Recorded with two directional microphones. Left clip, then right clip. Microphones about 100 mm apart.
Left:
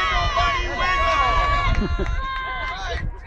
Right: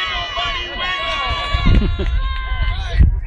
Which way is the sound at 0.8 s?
30° right (ahead or behind).